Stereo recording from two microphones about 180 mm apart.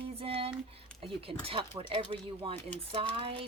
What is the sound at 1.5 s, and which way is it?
Speech, 30° right (ahead or behind).